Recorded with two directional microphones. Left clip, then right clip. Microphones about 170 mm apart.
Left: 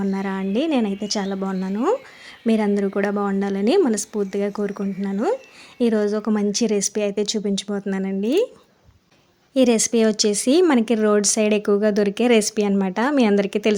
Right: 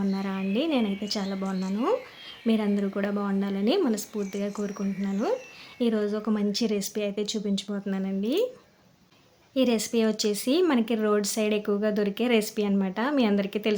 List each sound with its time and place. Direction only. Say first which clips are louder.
0.1 s a woman's voice: left 6 dB; 35° left (ahead or behind)
1.5 s speech: left 5 dB; centre (ahead or behind)
2.5 s a woman's voice: left 7 dB; 35° left (ahead or behind)
9.6 s speech: left 7 dB; 45° left (ahead or behind)